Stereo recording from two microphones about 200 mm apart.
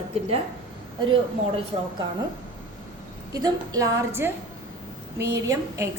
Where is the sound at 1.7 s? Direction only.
25° right (ahead or behind).